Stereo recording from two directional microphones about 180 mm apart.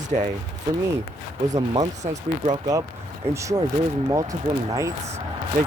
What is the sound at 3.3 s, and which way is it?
Speech, 15° right (ahead or behind).